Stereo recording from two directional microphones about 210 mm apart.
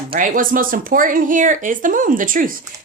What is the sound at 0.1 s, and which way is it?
A woman's voice, 40° right (ahead or behind).